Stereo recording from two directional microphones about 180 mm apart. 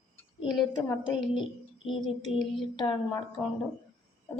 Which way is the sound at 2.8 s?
20° left (ahead or behind).